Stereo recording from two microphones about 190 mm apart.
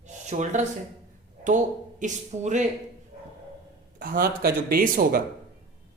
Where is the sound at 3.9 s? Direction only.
50° right (ahead or behind).